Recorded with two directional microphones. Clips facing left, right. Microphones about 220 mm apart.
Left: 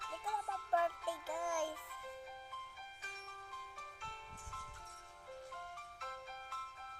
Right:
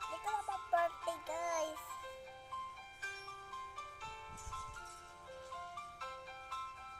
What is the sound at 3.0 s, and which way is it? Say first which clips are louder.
Music: right 3 dB; 5° right (ahead or behind).